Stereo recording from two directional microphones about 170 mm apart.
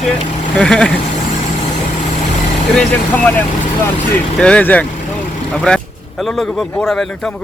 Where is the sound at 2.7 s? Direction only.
10° left (ahead or behind).